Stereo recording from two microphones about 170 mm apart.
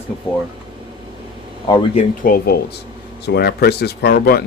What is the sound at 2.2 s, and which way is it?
Speech, 60° left (ahead or behind).